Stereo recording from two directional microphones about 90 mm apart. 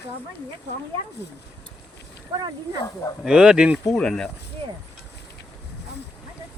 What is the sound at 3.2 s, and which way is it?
Speech, 10° right (ahead or behind).